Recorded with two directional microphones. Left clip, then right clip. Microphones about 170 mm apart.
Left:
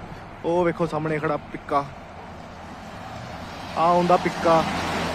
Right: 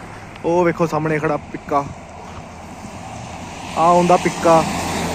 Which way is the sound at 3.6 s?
Centre (ahead or behind).